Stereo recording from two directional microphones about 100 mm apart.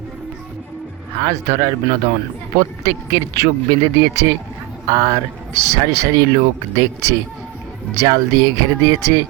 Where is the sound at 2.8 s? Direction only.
35° right (ahead or behind).